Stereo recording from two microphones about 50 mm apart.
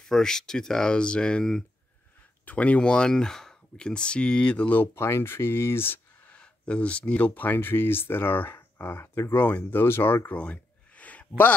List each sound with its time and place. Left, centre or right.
0.0 s speech: centre
2.4 s speech: left
4.9 s speech: left
6.3 s speech: left
9.4 s speech: left
10.3 s a sound: left